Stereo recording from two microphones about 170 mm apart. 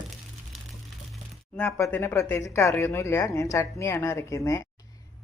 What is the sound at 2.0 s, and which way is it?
A woman's voice, 15° left (ahead or behind).